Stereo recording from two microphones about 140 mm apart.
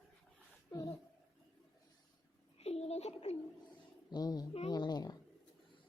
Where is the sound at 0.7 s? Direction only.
25° left (ahead or behind).